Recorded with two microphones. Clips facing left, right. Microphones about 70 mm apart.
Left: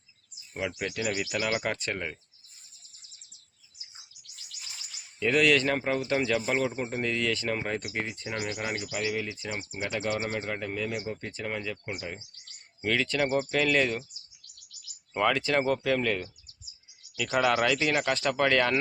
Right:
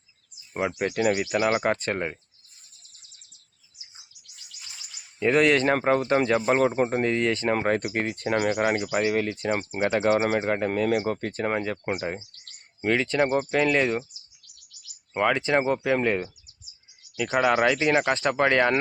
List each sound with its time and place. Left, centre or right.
0.5 s insect: right
5.2 s speech: right
10.2 s speech: right
12.8 s speech: right
15.1 s speech: centre
17.3 s speech: centre